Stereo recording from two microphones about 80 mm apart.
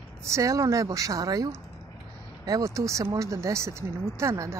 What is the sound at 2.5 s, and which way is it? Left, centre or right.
Speech, right.